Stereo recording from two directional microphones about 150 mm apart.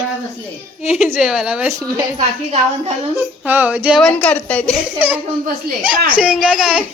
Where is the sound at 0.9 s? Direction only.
Centre (ahead or behind).